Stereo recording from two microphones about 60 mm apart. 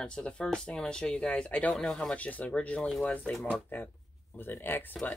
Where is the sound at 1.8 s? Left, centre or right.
Centre.